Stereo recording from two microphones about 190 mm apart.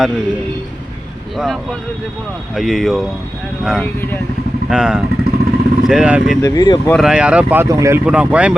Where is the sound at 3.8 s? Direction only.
10° left (ahead or behind).